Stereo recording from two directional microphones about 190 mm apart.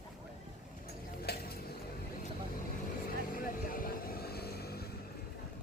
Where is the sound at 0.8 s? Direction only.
55° left (ahead or behind).